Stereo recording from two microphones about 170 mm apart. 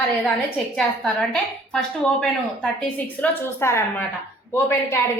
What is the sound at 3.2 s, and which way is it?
A woman's voice, 15° left (ahead or behind).